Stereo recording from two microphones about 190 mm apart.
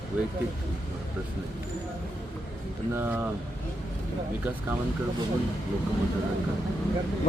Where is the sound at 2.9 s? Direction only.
10° right (ahead or behind).